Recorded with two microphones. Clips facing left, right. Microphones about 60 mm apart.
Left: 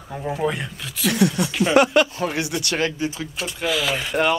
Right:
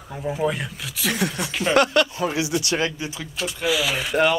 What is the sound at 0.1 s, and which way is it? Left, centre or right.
Speech, centre.